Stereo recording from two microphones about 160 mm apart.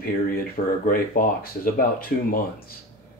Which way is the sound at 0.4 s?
65° left (ahead or behind).